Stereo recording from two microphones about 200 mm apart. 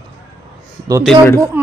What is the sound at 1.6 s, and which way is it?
Speech, 10° right (ahead or behind).